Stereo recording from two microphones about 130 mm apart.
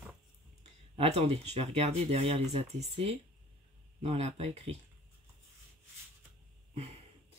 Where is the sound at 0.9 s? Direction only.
50° right (ahead or behind).